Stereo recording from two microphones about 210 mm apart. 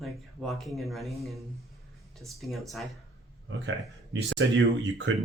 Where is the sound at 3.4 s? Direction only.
60° right (ahead or behind).